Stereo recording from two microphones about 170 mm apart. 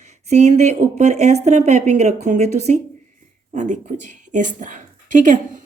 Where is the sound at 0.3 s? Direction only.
40° right (ahead or behind).